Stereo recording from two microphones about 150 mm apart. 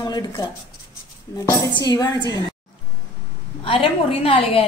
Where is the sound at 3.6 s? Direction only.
35° left (ahead or behind).